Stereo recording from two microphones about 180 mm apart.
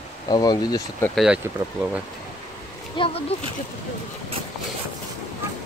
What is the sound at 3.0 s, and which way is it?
Speech, 25° left (ahead or behind).